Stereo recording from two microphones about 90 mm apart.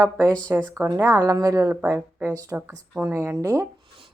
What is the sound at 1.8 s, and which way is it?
Speech, 15° right (ahead or behind).